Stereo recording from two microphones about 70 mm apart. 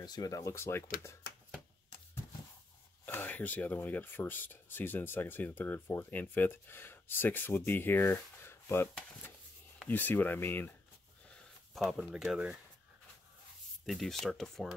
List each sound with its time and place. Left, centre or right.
0.0 s speech: left
3.1 s speech: left
9.8 s speech: left
11.7 s speech: centre
13.8 s speech: centre